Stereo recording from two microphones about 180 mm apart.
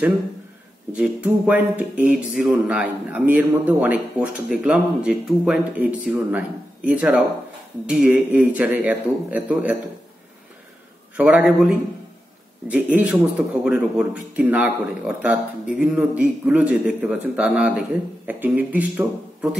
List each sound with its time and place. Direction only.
0.9 s speech: 5° right (ahead or behind)
11.1 s a man's voice: 5° right (ahead or behind)